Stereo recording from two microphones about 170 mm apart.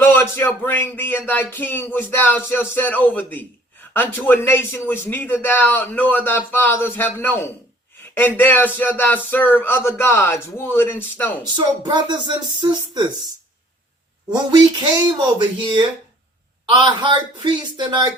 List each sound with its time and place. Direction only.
0.0 s a man's voice: 15° left (ahead or behind)
11.5 s speech: 25° right (ahead or behind)
14.3 s speech: 25° right (ahead or behind)